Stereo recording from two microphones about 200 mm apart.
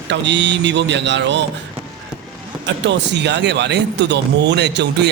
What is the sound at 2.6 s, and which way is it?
A man's voice, 60° right (ahead or behind).